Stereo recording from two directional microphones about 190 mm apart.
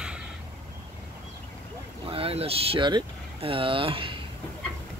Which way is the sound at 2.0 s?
30° right (ahead or behind).